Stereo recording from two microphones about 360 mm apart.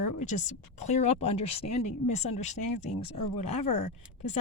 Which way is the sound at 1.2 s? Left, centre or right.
Left.